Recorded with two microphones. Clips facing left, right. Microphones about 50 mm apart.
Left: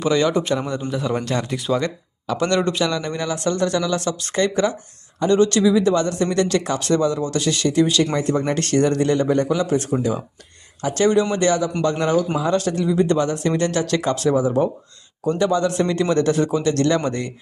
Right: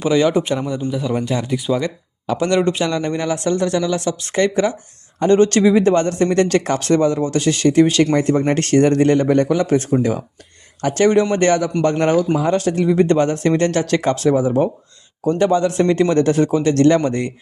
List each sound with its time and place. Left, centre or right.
0.0 s a man's voice: centre
0.9 s a man's voice: centre
2.2 s a man's voice: right
5.2 s speech: right
10.9 s a man's voice: right